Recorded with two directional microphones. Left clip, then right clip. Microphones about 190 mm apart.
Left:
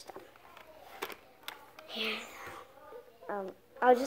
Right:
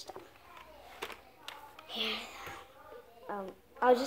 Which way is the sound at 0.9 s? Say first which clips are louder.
Left 2 dB; 45° left (ahead or behind).